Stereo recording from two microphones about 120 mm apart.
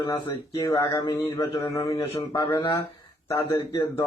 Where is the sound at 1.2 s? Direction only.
25° left (ahead or behind).